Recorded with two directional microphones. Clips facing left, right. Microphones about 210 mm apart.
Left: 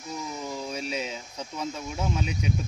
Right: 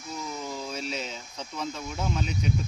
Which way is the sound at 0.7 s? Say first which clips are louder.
Left 2 dB; 10° left (ahead or behind).